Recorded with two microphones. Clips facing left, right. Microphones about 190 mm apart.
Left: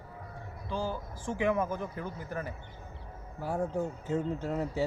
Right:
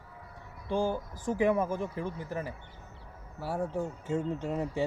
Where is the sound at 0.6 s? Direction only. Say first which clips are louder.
Right 5 dB; 50° right (ahead or behind); by 2.5 s 30° right (ahead or behind).